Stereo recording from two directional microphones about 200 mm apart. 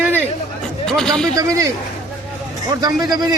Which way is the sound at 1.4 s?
15° right (ahead or behind).